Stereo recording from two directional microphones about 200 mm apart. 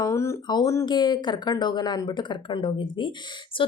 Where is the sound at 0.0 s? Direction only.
15° left (ahead or behind).